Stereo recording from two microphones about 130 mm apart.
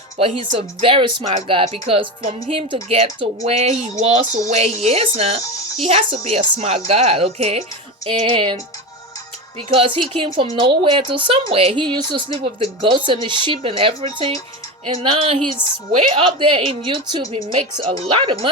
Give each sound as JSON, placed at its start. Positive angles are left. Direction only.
{"t": 0.2, "sound": "a woman's voice", "side_deg": -45}
{"t": 9.6, "sound": "a woman's voice", "side_deg": -45}
{"t": 15.6, "sound": "a woman's voice", "side_deg": 15}
{"t": 16.0, "sound": "speech", "side_deg": -45}